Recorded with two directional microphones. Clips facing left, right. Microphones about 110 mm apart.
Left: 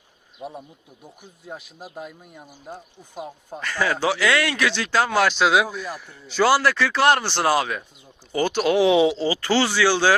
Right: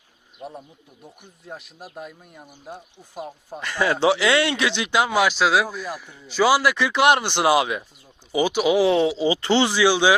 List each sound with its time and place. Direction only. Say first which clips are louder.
0.3 s speech: left 1 dB; centre (ahead or behind)
3.6 s speech: right 3 dB; 20° right (ahead or behind); by 9.1 s centre (ahead or behind)
9.1 s speech: right 2 dB; 20° right (ahead or behind)